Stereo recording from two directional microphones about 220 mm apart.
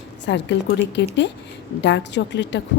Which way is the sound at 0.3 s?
50° left (ahead or behind).